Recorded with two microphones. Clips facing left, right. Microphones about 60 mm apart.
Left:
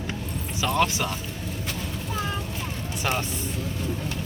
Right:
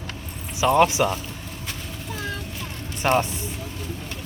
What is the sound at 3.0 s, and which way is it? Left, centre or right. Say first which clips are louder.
Speech: right 7 dB; centre.